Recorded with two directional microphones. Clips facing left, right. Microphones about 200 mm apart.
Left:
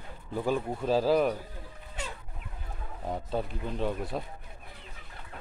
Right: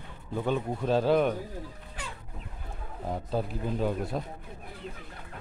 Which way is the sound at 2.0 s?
25° left (ahead or behind).